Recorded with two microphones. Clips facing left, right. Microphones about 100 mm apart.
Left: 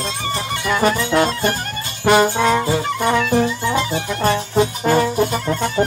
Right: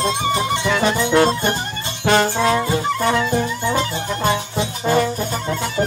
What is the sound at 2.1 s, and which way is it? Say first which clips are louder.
Music: left 2 dB; 10° left (ahead or behind).